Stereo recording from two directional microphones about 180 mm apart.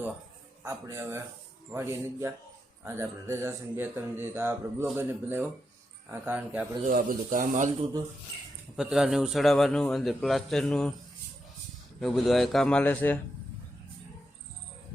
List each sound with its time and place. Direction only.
0.6 s speech: 15° right (ahead or behind)
6.8 s speech: 50° right (ahead or behind)
8.7 s a man's voice: centre (ahead or behind)
11.9 s a man's voice: centre (ahead or behind)